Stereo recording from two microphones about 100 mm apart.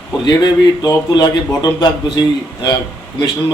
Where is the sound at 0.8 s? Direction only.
45° left (ahead or behind).